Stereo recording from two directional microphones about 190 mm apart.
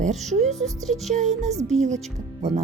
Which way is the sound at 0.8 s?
Centre (ahead or behind).